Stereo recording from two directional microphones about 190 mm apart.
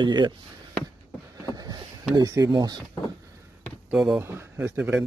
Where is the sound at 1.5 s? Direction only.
20° right (ahead or behind).